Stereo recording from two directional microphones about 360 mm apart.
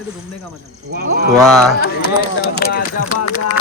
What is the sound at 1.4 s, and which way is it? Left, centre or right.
Speech, centre.